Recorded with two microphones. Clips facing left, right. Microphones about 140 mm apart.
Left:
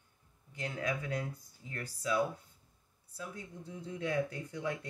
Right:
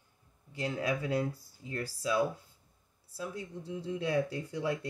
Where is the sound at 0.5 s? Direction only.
35° right (ahead or behind).